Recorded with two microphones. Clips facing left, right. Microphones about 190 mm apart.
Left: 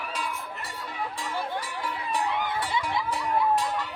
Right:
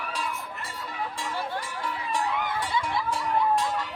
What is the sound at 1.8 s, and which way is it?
Music, centre (ahead or behind).